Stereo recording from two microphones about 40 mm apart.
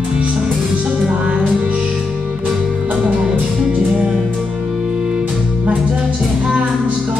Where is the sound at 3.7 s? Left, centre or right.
Right.